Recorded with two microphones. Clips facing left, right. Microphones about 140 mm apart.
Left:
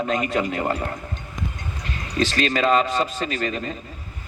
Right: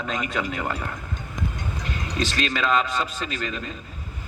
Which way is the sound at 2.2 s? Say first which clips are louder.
Left 5 dB; 50° left (ahead or behind).